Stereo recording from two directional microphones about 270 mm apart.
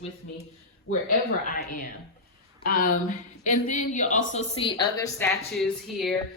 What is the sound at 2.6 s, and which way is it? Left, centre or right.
A woman's voice, left.